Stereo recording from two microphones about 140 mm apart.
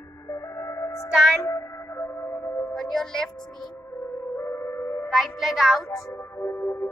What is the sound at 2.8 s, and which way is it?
Speech, 5° left (ahead or behind).